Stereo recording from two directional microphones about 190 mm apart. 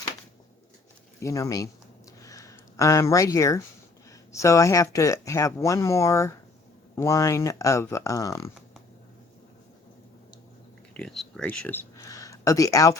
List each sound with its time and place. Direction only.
1.2 s speech: 15° left (ahead or behind)
2.2 s a sound: 15° left (ahead or behind)
4.3 s speech: 15° left (ahead or behind)
10.9 s speech: centre (ahead or behind)